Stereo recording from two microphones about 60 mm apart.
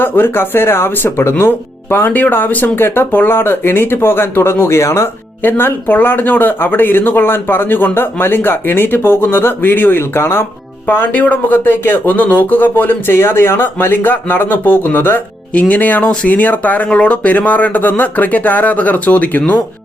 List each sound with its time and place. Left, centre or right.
0.0 s speech: left
5.4 s speech: left
10.2 s speech: left
10.8 s speech: left
15.5 s speech: left